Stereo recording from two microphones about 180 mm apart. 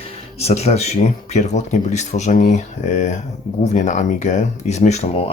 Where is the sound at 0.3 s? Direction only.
35° left (ahead or behind).